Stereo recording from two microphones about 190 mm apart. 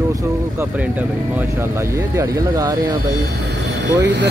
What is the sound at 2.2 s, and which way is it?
Speech, 20° right (ahead or behind).